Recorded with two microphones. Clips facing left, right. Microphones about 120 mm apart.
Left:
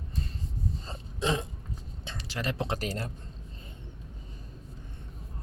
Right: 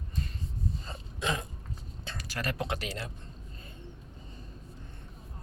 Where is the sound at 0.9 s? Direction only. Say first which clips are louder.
Left 5 dB; 30° left (ahead or behind).